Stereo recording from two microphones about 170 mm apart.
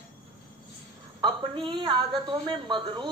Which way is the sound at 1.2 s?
30° right (ahead or behind).